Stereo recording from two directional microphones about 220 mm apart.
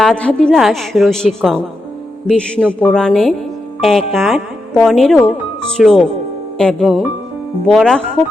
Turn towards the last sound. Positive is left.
turn(degrees=0)  # may be behind; listen again after turning